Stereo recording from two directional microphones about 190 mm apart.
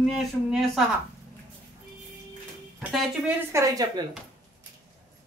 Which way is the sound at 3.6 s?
20° right (ahead or behind).